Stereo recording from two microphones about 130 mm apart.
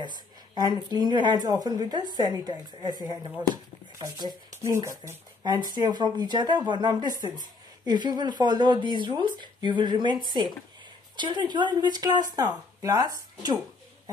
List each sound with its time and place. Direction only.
0.0 s speech: 35° right (ahead or behind)